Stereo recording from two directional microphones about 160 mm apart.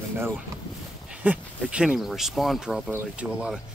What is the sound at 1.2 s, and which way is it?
Speech, 10° right (ahead or behind).